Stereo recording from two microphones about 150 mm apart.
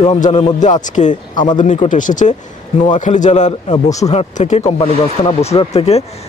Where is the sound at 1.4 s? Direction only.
60° left (ahead or behind); by 6.0 s 40° left (ahead or behind).